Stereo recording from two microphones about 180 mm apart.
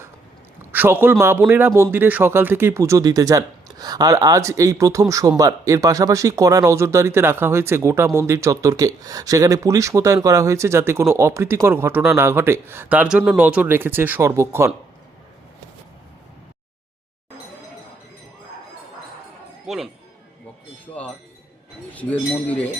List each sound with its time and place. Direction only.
0.7 s a man's voice: 10° right (ahead or behind)
19.6 s speech: centre (ahead or behind)
20.8 s chink: 10° left (ahead or behind)
21.9 s speech: 10° left (ahead or behind)